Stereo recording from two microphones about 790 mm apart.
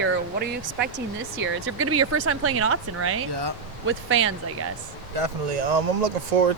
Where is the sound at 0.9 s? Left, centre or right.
Centre.